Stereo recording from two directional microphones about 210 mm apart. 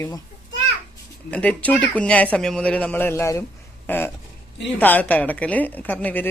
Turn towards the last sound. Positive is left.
turn(degrees=10)  # may be behind; listen again after turning